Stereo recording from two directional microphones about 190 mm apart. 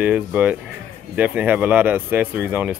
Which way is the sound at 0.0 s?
5° right (ahead or behind).